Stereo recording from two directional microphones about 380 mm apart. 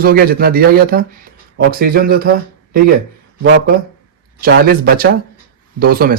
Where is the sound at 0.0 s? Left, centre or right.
Right.